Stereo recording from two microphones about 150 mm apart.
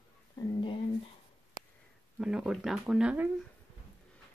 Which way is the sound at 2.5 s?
Centre (ahead or behind).